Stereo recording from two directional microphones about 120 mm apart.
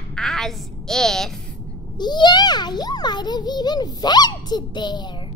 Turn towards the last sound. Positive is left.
turn(degrees=40)  # may be behind; listen again after turning